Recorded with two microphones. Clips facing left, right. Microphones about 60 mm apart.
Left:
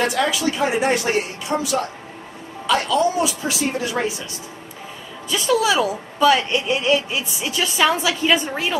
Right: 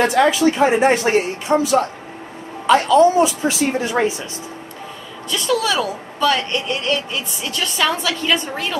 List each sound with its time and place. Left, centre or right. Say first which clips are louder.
0.0 s speech: right 6 dB; right
5.3 s a woman's voice: left 1 dB; centre